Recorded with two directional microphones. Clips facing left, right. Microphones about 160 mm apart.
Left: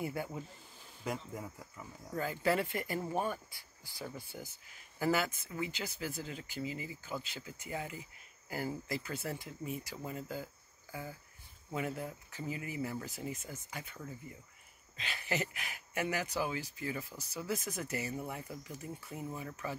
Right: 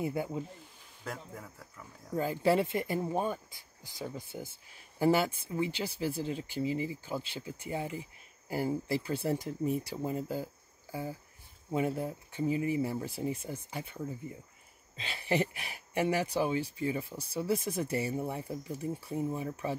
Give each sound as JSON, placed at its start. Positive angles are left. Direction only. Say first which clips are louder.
{"t": 0.0, "sound": "speech", "louder": "right 5 dB", "side_deg": -20}
{"t": 1.0, "sound": "speech", "louder": "left 3 dB", "side_deg": 10}
{"t": 2.1, "sound": "speech", "louder": "right 5 dB", "side_deg": -25}
{"t": 10.2, "sound": "cricket", "louder": "right 6 dB", "side_deg": -30}
{"t": 11.7, "sound": "speech", "louder": "right 6 dB", "side_deg": -30}